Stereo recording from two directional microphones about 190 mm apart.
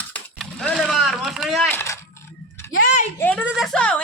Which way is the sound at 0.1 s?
5° left (ahead or behind).